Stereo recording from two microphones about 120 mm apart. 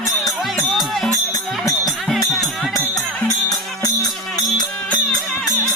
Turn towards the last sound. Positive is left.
turn(degrees=35)  # may be behind; listen again after turning